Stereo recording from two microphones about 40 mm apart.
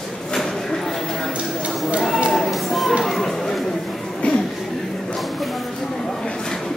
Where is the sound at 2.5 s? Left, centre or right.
Centre.